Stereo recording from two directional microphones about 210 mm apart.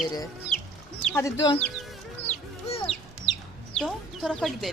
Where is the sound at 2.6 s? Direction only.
30° left (ahead or behind).